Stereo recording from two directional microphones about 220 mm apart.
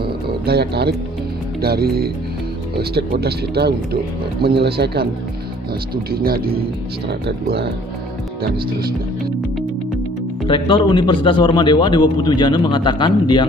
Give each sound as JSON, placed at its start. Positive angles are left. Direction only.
{"t": 0.0, "sound": "music", "side_deg": -45}
{"t": 1.6, "sound": "speech", "side_deg": -45}
{"t": 6.1, "sound": "speech", "side_deg": -45}
{"t": 10.4, "sound": "speech", "side_deg": 20}